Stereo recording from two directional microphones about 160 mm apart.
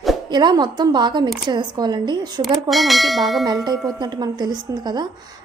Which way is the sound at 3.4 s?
25° right (ahead or behind).